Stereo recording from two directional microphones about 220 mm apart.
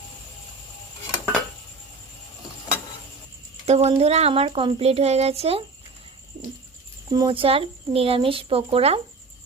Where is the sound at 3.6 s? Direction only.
30° right (ahead or behind).